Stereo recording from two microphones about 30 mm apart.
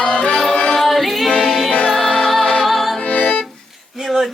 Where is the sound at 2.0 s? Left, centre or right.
Left.